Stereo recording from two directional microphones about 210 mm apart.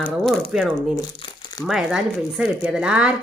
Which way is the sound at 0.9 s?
20° left (ahead or behind).